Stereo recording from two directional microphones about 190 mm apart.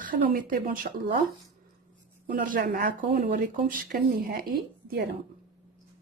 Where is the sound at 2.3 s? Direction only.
45° right (ahead or behind).